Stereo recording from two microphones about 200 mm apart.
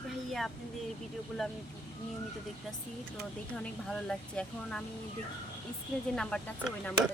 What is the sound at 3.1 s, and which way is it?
Speech, 5° left (ahead or behind).